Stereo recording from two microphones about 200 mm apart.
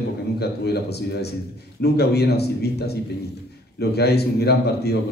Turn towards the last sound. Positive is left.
turn(degrees=55)  # may be behind; listen again after turning